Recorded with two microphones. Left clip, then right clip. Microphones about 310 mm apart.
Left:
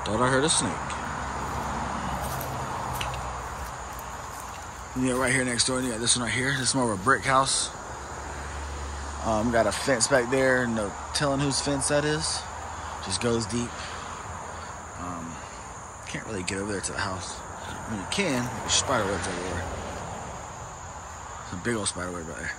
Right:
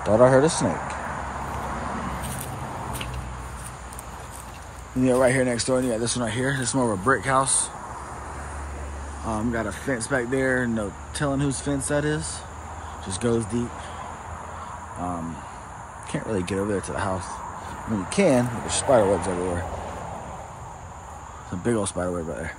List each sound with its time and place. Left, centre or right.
0.2 s speech: centre
0.5 s speech: right
5.0 s speech: centre
9.3 s speech: centre
16.1 s speech: centre
18.1 s speech: centre
18.9 s speech: right
21.6 s speech: centre